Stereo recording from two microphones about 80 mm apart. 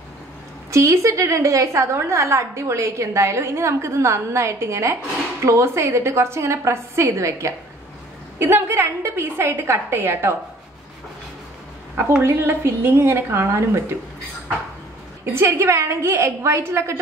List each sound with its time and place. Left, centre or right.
0.7 s a woman's voice: right
12.2 s a woman's voice: right
15.3 s a woman's voice: right